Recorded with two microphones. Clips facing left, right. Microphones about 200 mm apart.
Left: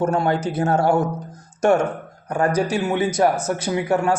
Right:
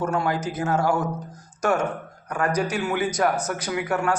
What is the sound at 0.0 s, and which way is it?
Speech, 30° left (ahead or behind).